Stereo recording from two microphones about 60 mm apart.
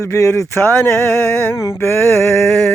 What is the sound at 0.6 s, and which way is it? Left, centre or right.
Male singing, centre.